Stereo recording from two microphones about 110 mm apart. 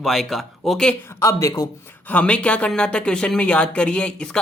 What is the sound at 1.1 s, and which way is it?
Speech, 30° left (ahead or behind).